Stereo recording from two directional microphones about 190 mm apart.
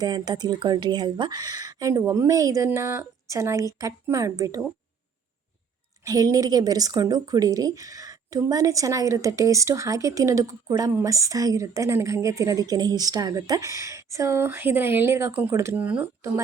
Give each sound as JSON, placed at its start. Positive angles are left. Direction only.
{"t": 0.0, "sound": "speech", "side_deg": -20}
{"t": 6.1, "sound": "speech", "side_deg": -20}